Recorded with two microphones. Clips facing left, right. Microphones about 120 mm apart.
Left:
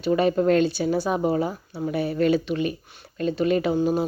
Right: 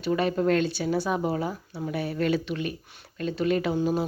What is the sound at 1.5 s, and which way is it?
Speech, 25° left (ahead or behind).